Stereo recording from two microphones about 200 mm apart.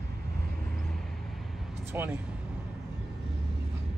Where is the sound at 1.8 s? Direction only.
10° right (ahead or behind).